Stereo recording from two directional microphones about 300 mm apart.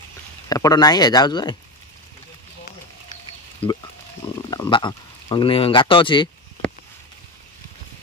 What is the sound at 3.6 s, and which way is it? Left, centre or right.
Speech, centre.